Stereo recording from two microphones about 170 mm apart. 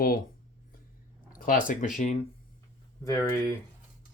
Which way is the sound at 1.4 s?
50° left (ahead or behind).